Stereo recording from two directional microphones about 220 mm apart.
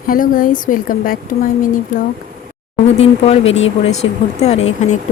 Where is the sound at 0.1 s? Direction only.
40° left (ahead or behind).